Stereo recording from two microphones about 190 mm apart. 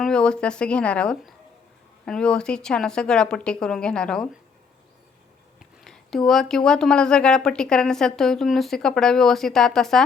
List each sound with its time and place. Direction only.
0.0 s speech: 5° left (ahead or behind)
5.5 s speech: centre (ahead or behind)